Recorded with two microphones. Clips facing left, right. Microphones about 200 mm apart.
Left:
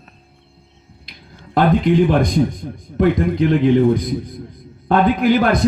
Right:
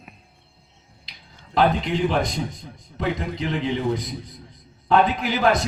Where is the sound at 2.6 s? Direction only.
55° left (ahead or behind).